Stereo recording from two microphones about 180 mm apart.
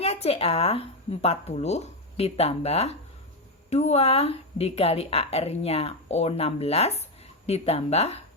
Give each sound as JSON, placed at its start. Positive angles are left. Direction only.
{"t": 0.0, "sound": "speech", "side_deg": 35}